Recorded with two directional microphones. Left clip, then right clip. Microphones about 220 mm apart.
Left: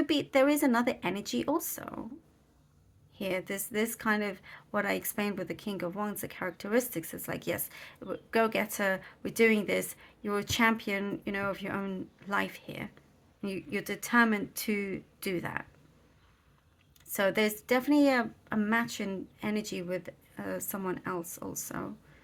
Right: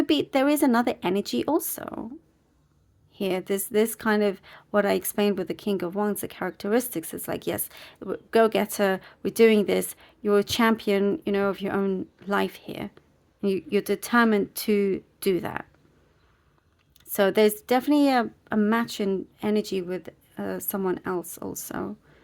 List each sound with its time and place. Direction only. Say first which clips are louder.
0.0 s speech: right 4 dB; 40° right (ahead or behind)
3.2 s speech: right 7 dB; 45° right (ahead or behind)
17.1 s speech: right 8 dB; 40° right (ahead or behind)